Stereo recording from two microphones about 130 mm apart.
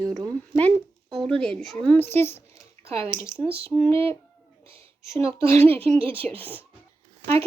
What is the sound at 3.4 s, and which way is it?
Speech, 50° right (ahead or behind).